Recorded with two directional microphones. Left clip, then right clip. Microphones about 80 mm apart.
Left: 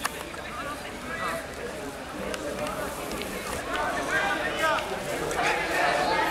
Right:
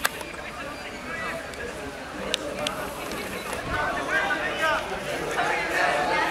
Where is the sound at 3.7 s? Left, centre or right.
Centre.